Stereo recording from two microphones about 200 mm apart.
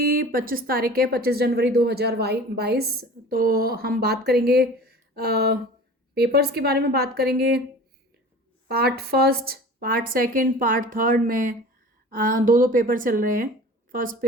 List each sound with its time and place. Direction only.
0.0 s speech: 45° right (ahead or behind)
8.6 s speech: 50° right (ahead or behind)